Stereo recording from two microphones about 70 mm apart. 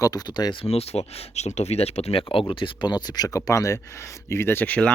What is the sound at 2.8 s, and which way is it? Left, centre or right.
Speech, left.